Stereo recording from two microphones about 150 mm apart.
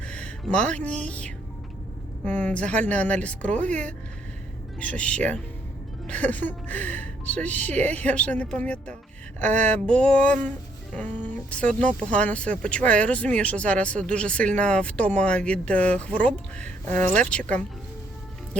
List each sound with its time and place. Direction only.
0.0 s a sound: 10° left (ahead or behind)
0.7 s speech: 10° left (ahead or behind)
3.6 s speech: 55° right (ahead or behind)
4.8 s speech: 10° left (ahead or behind)